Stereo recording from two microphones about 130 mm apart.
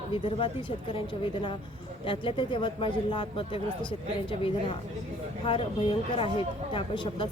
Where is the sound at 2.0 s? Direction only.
40° left (ahead or behind).